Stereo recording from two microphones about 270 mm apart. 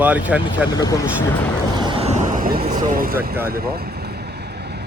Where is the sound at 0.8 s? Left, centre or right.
Centre.